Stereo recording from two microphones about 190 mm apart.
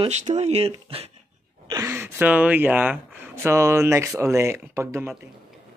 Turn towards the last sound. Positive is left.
turn(degrees=-15)  # may be behind; listen again after turning